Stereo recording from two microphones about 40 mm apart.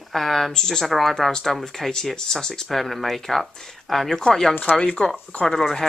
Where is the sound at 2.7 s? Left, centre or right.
Centre; by 5.1 s left.